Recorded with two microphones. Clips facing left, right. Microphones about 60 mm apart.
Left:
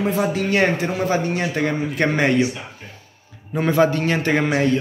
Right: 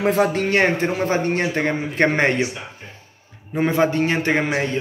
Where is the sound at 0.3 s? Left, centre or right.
Right.